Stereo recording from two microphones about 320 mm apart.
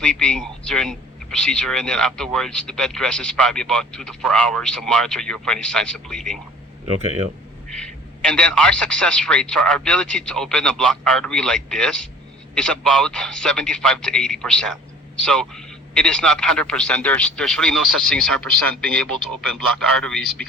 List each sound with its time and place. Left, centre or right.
0.0 s speech: centre
7.0 s speech: right
7.7 s speech: centre